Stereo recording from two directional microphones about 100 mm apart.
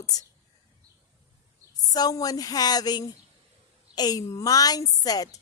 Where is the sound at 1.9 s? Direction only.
40° left (ahead or behind).